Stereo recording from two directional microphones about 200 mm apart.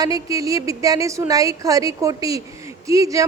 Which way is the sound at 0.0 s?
15° right (ahead or behind).